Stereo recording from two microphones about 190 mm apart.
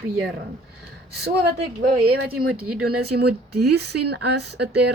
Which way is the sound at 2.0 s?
55° right (ahead or behind).